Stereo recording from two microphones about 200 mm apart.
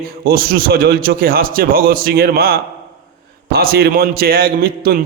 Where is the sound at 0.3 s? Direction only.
50° right (ahead or behind).